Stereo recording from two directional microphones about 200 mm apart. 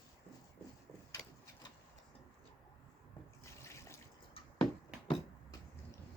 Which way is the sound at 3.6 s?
15° left (ahead or behind).